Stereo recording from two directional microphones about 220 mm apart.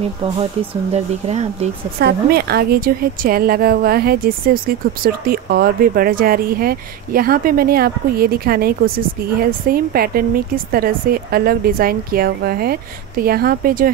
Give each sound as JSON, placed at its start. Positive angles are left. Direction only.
{"t": 0.9, "sound": "speech", "side_deg": -30}
{"t": 2.0, "sound": "a woman's voice", "side_deg": -45}